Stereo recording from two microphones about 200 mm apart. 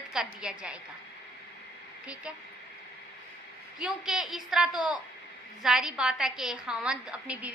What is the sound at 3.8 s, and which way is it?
A woman's voice, 5° right (ahead or behind).